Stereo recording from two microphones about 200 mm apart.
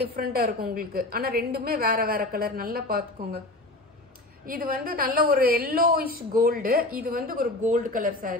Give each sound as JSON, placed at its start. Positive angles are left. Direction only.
{"t": 0.0, "sound": "a woman's voice", "side_deg": -50}
{"t": 4.5, "sound": "a woman's voice", "side_deg": -45}